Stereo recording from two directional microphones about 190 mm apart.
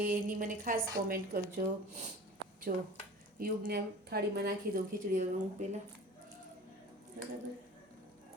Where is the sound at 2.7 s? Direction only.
45° right (ahead or behind).